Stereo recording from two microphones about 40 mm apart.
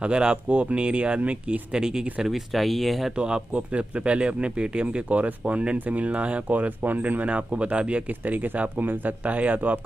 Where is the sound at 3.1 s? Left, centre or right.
Right.